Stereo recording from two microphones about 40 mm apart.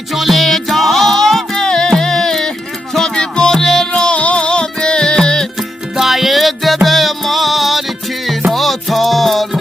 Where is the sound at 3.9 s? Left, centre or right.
Left.